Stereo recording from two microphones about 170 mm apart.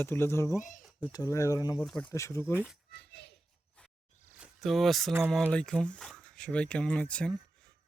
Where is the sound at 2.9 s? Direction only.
80° left.